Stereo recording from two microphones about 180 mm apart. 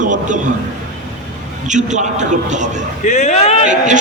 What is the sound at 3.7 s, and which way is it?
Speech, 45° right (ahead or behind).